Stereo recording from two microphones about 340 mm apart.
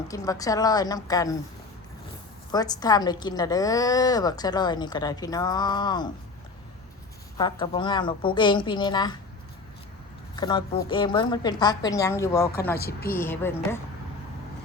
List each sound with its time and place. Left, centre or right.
0.1 s a woman's voice: centre
2.5 s a woman's voice: centre
7.3 s a woman's voice: centre
10.3 s a woman's voice: centre
12.8 s a woman's voice: left
13.1 s a woman's voice: centre